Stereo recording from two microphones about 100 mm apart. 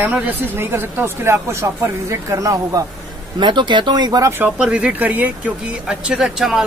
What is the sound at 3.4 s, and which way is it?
Speech, 50° right (ahead or behind).